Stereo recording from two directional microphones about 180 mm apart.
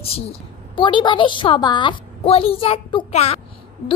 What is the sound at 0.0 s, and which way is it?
A woman's voice, 35° left (ahead or behind).